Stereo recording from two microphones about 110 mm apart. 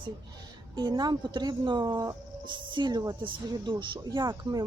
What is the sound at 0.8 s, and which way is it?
Speech, 40° right (ahead or behind).